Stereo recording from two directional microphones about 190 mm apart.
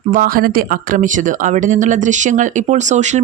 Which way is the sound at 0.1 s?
45° right (ahead or behind).